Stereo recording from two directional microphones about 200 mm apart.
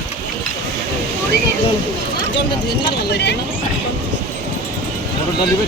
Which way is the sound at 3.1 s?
55° left (ahead or behind).